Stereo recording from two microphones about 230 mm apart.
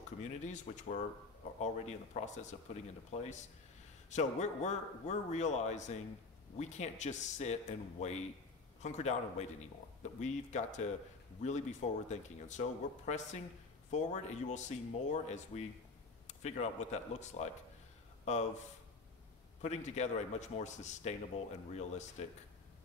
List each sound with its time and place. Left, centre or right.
0.2 s a man's voice: left
19.6 s a man's voice: left